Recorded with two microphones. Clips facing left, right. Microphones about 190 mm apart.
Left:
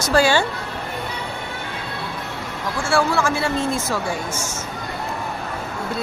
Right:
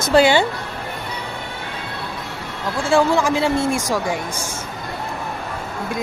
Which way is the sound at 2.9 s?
15° right (ahead or behind).